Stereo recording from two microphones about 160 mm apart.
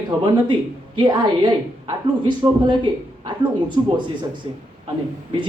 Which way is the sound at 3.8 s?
30° right (ahead or behind).